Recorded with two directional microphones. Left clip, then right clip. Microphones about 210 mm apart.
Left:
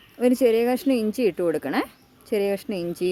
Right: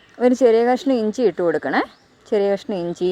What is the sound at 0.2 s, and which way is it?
Speech, 5° right (ahead or behind).